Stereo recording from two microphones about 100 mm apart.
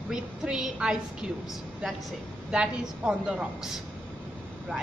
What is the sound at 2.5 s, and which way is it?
A woman's voice, 10° right (ahead or behind).